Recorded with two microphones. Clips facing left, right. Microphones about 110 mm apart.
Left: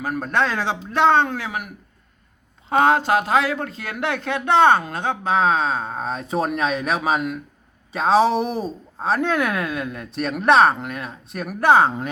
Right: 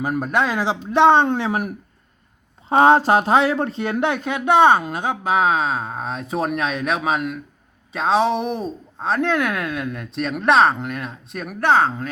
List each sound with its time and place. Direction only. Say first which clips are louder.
0.0 s a man's voice: right 1 dB; 15° right (ahead or behind)
4.1 s speech: left 1 dB; 15° right (ahead or behind); by 12.0 s 15° left (ahead or behind)